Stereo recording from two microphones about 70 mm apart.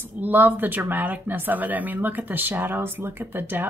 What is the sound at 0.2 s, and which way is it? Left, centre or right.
A woman's voice, right.